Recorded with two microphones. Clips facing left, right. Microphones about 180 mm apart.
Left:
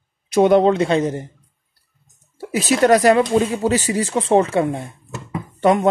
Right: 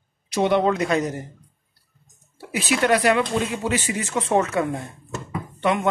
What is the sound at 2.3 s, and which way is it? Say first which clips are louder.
Speech: left 5 dB; 40° left (ahead or behind).